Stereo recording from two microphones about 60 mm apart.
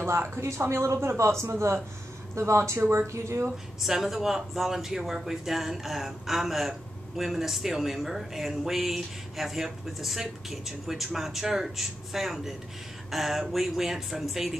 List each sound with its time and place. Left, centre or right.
0.0 s speech: right
3.8 s speech: centre